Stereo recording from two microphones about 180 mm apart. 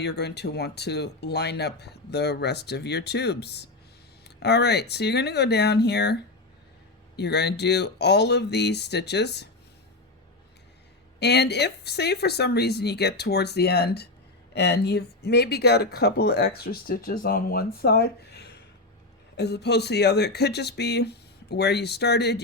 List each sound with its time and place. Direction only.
0.0 s speech: 65° left (ahead or behind)
7.2 s speech: 70° left (ahead or behind)
11.2 s speech: 65° left (ahead or behind)